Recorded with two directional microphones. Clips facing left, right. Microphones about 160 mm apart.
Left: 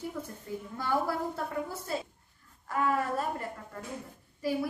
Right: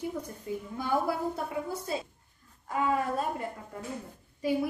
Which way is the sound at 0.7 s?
15° right (ahead or behind).